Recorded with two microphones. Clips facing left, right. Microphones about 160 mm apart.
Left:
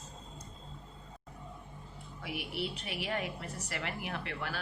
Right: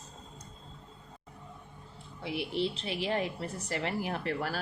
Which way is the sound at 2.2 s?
30° right (ahead or behind).